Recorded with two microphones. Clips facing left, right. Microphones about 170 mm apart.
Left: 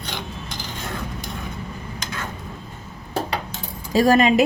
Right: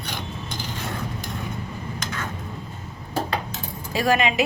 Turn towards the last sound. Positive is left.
turn(degrees=40)  # may be behind; listen again after turning